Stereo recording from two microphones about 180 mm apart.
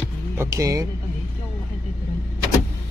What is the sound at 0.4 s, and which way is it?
Speech, 15° right (ahead or behind).